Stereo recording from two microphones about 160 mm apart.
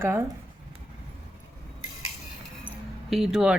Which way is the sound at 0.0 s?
15° right (ahead or behind).